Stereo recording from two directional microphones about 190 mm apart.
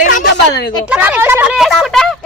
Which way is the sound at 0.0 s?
45° left (ahead or behind).